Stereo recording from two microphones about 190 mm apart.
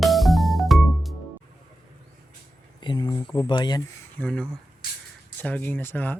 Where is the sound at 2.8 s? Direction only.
25° left (ahead or behind).